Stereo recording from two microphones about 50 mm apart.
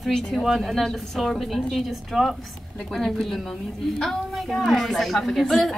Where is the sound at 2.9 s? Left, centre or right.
Centre.